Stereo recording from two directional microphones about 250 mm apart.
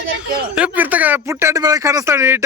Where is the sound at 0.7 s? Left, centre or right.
Centre.